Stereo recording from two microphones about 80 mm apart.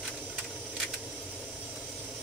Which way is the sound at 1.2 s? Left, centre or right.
Centre.